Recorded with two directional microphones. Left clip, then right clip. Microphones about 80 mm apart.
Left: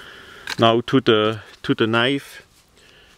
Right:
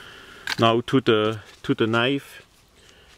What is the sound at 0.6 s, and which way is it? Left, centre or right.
Speech, left.